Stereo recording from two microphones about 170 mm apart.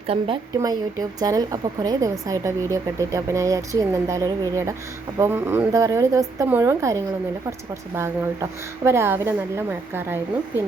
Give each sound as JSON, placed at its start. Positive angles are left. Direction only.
{"t": 0.1, "sound": "speech", "side_deg": -35}
{"t": 0.6, "sound": "a woman's voice", "side_deg": -20}